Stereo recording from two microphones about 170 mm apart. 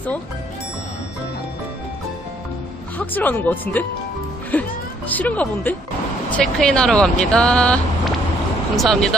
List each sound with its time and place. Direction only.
3.0 s speech: 10° left (ahead or behind)